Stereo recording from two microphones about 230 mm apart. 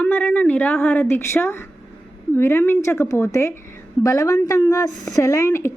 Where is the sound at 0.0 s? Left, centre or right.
Centre.